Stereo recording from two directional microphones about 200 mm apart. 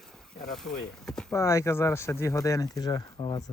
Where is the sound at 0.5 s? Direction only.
5° left (ahead or behind).